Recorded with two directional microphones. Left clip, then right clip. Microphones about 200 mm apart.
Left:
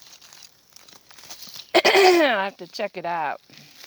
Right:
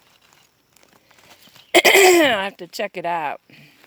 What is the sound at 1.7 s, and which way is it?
Speech, 25° right (ahead or behind).